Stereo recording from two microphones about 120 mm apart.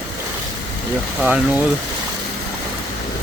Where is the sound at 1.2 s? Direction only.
10° right (ahead or behind).